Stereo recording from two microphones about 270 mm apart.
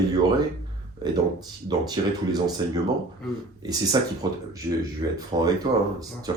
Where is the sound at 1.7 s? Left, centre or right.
Centre.